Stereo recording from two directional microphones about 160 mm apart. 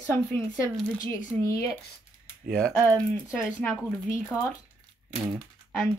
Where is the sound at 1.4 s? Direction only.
20° left (ahead or behind).